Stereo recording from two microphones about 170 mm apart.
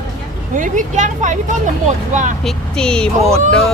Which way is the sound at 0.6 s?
50° right (ahead or behind).